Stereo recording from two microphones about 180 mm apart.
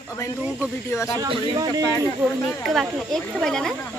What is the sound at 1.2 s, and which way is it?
Speech, 20° right (ahead or behind).